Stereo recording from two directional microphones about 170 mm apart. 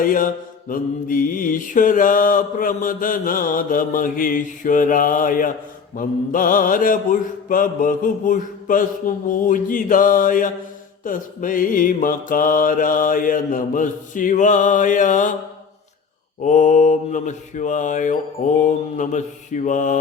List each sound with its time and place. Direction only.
0.0 s mantra: 55° left (ahead or behind)
16.4 s mantra: 45° left (ahead or behind)